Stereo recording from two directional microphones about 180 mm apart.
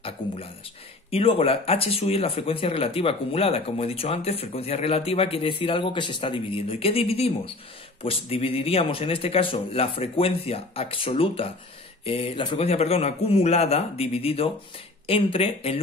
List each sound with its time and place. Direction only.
1.1 s speech: 30° left (ahead or behind)